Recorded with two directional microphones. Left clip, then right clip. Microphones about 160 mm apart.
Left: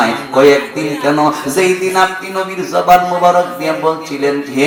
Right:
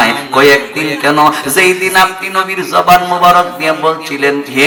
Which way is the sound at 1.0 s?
25° right (ahead or behind).